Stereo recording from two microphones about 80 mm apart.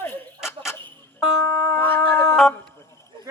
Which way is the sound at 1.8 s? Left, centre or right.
Left.